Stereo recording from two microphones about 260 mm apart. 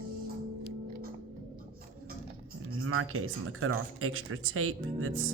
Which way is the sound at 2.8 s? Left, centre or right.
Right.